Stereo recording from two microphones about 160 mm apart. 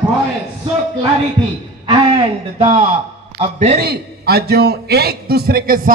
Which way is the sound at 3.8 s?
80° right.